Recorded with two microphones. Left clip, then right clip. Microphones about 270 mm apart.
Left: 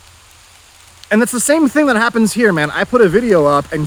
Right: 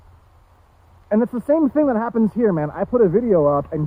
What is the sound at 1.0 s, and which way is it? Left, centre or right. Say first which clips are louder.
Speech: left 5 dB; left.